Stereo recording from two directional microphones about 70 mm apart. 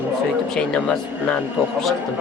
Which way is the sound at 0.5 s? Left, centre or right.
Centre.